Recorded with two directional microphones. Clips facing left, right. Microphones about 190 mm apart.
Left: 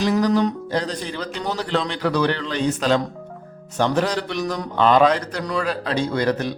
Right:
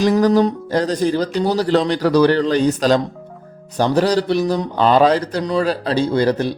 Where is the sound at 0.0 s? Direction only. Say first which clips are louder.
Right 5 dB; 40° right (ahead or behind).